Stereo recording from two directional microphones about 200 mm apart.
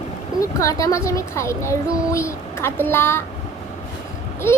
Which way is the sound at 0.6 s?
15° left (ahead or behind).